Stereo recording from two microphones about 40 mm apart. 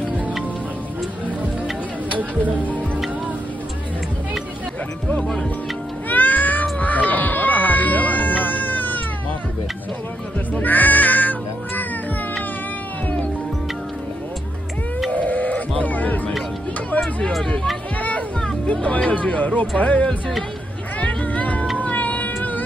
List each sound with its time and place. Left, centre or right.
2.1 s speech: right
6.0 s cat: left
10.5 s crow: left
15.0 s a sound: left
16.9 s hubbub: left
18.7 s speech: left
21.0 s music: left
21.7 s cat: left